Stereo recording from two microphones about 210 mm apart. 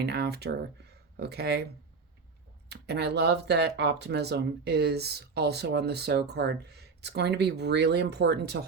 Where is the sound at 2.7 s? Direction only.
50° right (ahead or behind).